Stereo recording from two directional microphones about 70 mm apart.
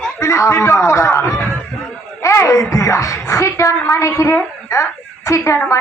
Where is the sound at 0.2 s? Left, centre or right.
Left.